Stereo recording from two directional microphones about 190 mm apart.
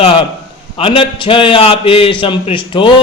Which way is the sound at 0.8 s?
25° left (ahead or behind).